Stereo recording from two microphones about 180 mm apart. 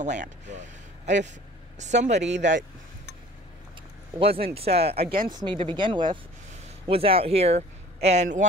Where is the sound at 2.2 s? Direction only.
80° right.